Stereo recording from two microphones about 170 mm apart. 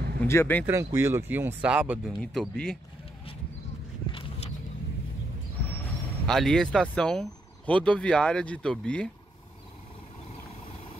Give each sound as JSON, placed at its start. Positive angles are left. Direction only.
{"t": 0.2, "sound": "speech", "side_deg": 15}
{"t": 0.7, "sound": "speech", "side_deg": -15}
{"t": 6.2, "sound": "speech", "side_deg": 5}